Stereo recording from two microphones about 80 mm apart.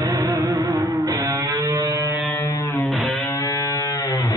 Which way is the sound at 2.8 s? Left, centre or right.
Centre.